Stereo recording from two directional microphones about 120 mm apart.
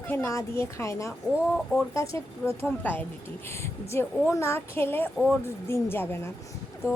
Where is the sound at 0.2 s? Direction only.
25° left (ahead or behind).